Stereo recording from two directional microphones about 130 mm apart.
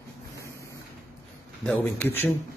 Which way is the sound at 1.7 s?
15° left (ahead or behind).